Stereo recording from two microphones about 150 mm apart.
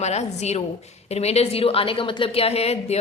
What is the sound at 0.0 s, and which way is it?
A woman's voice, 45° left (ahead or behind).